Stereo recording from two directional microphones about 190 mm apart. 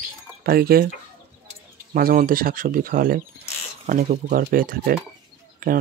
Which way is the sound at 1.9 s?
50° right (ahead or behind).